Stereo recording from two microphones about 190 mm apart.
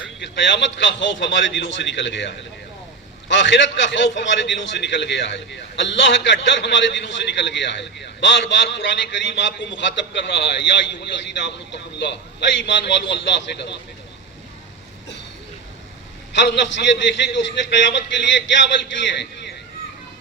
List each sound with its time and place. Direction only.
0.2 s a man's voice: 70° left (ahead or behind)
16.3 s a man's voice: 70° left (ahead or behind)